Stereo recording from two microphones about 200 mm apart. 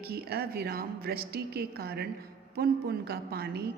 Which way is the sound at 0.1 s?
50° right (ahead or behind).